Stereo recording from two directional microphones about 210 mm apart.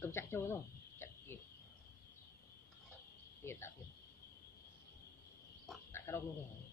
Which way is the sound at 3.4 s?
10° left (ahead or behind).